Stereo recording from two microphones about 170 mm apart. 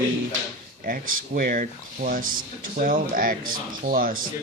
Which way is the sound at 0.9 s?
55° right (ahead or behind).